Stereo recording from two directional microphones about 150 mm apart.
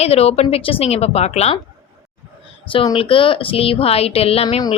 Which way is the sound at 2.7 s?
35° left (ahead or behind).